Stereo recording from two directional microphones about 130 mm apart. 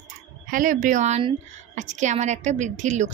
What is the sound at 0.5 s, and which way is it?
A woman's voice, 90° right.